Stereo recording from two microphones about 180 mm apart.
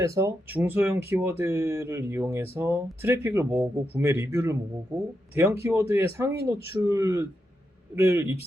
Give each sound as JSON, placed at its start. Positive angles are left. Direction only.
{"t": 0.0, "sound": "speech", "side_deg": -15}